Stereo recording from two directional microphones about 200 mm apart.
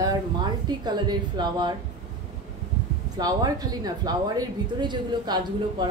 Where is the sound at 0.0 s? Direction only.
20° right (ahead or behind).